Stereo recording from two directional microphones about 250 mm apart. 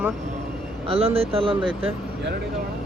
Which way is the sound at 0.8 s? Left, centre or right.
Right.